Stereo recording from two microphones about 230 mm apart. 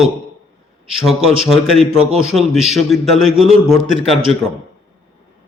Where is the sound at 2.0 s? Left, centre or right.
Right.